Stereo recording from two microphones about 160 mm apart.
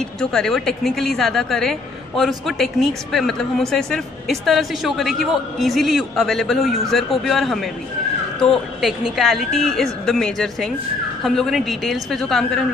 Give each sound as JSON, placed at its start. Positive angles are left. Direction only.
{"t": 0.0, "sound": "a woman's voice", "side_deg": 5}